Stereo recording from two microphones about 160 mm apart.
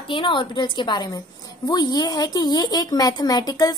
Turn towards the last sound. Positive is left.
turn(degrees=25)  # may be behind; listen again after turning